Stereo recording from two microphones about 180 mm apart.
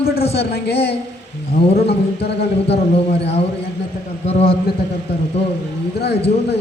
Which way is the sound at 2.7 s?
35° left (ahead or behind).